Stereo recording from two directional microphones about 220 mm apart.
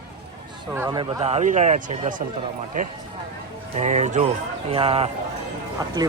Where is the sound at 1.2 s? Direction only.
30° right (ahead or behind).